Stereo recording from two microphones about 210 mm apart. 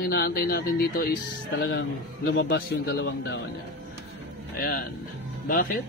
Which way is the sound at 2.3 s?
50° left (ahead or behind).